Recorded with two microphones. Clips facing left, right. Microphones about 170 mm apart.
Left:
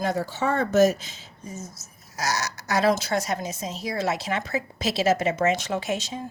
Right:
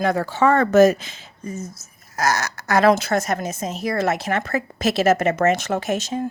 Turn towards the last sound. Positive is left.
turn(degrees=-55)  # may be behind; listen again after turning